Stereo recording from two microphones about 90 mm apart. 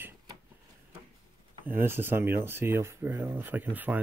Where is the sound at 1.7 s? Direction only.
25° right (ahead or behind).